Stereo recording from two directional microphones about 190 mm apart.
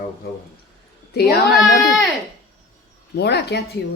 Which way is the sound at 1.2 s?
60° left (ahead or behind).